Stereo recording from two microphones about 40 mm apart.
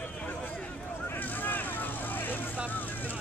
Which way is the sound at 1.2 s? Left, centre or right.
Left.